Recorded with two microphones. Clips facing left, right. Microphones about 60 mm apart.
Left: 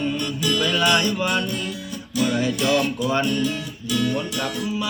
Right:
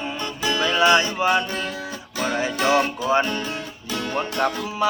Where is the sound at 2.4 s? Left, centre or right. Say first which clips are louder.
Right 4 dB; right.